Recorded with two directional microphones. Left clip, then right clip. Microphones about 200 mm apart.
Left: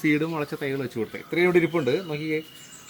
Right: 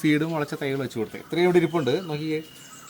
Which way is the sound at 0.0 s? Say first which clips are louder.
Even; 30° right (ahead or behind).